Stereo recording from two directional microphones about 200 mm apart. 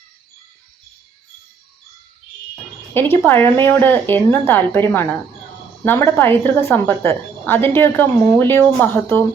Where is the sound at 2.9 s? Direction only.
10° left (ahead or behind).